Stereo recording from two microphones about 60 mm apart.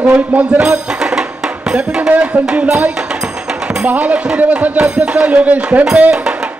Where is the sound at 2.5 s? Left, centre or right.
Centre.